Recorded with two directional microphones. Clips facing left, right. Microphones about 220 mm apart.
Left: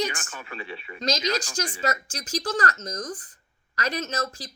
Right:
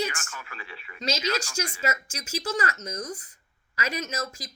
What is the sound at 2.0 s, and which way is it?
Speech, 10° right (ahead or behind).